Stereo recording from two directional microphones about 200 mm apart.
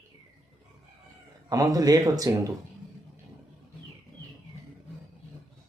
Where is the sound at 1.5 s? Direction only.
20° right (ahead or behind).